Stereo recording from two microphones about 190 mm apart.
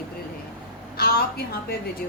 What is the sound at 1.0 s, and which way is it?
Speech, 55° left (ahead or behind).